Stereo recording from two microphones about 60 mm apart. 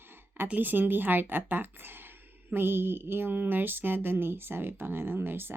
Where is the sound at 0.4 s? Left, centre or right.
Right.